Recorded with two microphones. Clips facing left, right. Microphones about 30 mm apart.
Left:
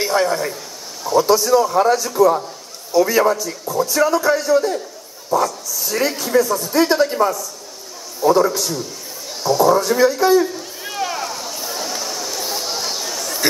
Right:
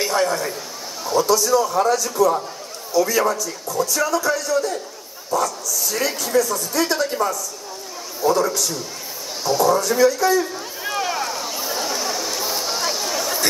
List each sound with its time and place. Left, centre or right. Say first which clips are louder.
0.0 s a man's voice: left 2 dB; centre
1.2 s a man's voice: left 2 dB; left
5.3 s a man's voice: left 3 dB; centre
6.7 s a man's voice: left 7 dB; left
8.2 s a man's voice: left 4 dB; centre
9.4 s speech: left 3 dB; centre
9.8 s a man's voice: left 2 dB; centre
10.4 s a sound: left 3 dB; centre